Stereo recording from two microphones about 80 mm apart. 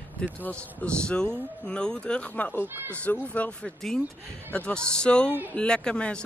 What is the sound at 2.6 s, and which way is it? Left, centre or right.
Speech, right.